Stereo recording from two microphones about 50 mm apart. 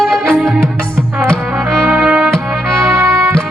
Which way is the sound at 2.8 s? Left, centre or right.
Right.